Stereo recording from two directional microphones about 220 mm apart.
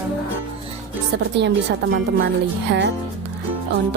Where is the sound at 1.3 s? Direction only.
50° right (ahead or behind).